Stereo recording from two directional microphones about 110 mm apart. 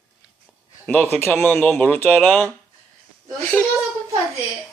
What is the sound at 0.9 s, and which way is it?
Speech, 15° left (ahead or behind).